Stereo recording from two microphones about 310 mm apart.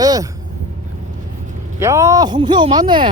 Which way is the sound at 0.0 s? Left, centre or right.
Centre.